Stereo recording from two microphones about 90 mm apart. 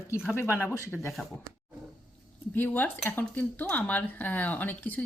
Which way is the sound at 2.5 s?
20° left (ahead or behind).